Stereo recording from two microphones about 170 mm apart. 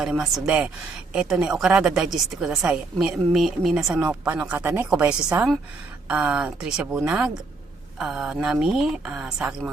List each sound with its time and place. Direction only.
0.0 s a woman's voice: 5° right (ahead or behind)